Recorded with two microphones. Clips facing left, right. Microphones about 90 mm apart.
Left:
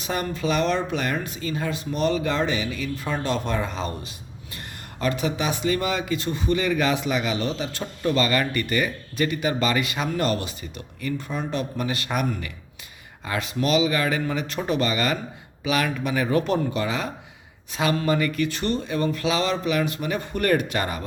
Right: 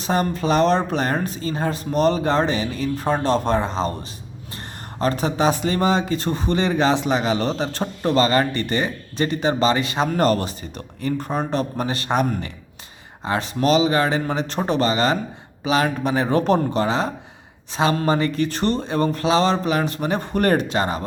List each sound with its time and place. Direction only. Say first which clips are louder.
0.0 s speech: right 5 dB; 35° right (ahead or behind)
4.9 s speech: right 4 dB; 35° right (ahead or behind)